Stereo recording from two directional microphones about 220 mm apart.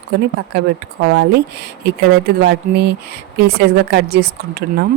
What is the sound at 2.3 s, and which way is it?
Speech, 50° right (ahead or behind).